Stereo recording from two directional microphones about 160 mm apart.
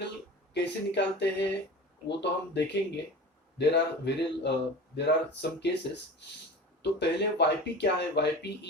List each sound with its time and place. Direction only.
0.5 s speech: 90° left
6.8 s speech: 90° left